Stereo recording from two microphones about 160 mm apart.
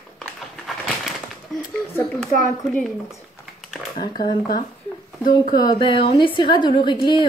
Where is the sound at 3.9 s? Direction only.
30° left (ahead or behind).